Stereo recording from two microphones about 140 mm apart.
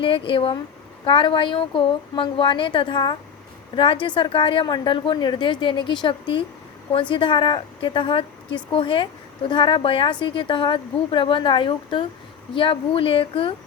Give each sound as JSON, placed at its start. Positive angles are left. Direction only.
{"t": 0.0, "sound": "a woman's voice", "side_deg": 40}